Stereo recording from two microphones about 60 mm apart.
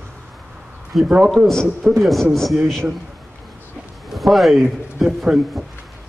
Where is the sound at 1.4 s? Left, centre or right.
Right.